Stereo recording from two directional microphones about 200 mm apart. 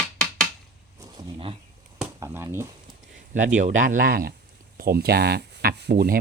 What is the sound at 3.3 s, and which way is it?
Speech, 40° right (ahead or behind).